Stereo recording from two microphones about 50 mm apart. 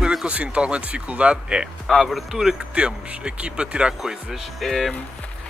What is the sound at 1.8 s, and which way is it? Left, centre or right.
Speech, centre.